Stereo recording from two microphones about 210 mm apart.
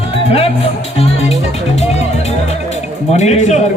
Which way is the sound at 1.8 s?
30° left (ahead or behind).